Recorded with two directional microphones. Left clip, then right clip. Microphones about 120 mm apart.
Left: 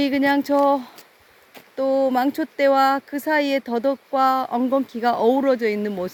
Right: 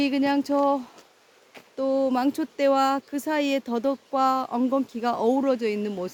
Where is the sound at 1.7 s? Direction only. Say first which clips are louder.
Left 4 dB; 10° left (ahead or behind).